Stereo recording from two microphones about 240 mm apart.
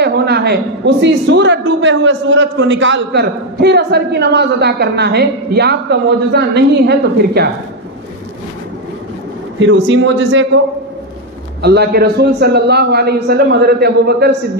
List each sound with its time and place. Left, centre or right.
0.0 s a man's voice: right
9.6 s a man's voice: right
11.6 s a man's voice: right